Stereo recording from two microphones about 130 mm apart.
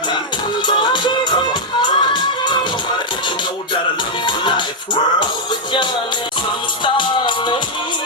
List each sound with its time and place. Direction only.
0.7 s music: 35° left (ahead or behind)
4.3 s music: 35° left (ahead or behind)
6.8 s music: 35° left (ahead or behind)